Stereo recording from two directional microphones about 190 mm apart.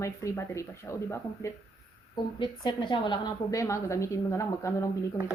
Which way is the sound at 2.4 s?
25° left (ahead or behind).